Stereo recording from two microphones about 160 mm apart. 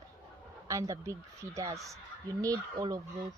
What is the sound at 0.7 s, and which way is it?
Speech, 20° right (ahead or behind).